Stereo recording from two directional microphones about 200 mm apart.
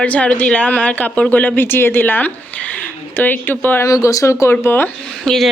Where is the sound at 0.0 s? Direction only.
5° left (ahead or behind).